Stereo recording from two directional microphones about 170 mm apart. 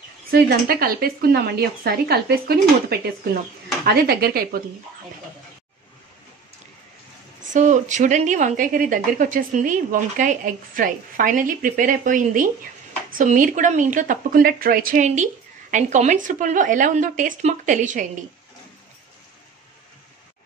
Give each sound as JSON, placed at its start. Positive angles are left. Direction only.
{"t": 0.3, "sound": "speech", "side_deg": -65}
{"t": 3.8, "sound": "speech", "side_deg": -65}
{"t": 7.5, "sound": "speech", "side_deg": -45}